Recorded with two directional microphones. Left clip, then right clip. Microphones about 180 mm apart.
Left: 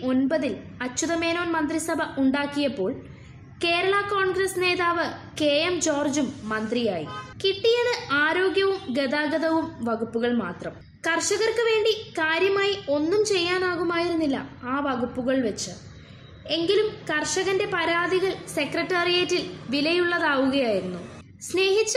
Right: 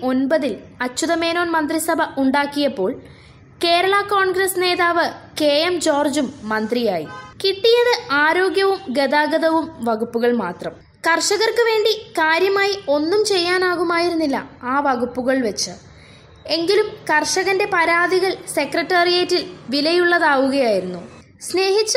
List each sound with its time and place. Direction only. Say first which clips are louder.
0.0 s a woman's voice: right 6 dB; 25° right (ahead or behind)